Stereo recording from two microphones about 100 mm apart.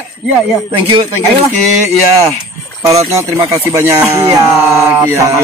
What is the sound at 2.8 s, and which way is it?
Speech, 30° right (ahead or behind).